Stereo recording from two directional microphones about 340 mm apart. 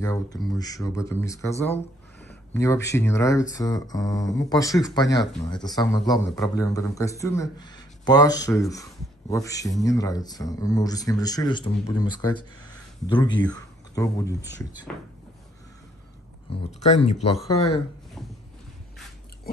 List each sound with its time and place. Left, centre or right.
0.0 s a man's voice: centre
16.5 s a man's voice: centre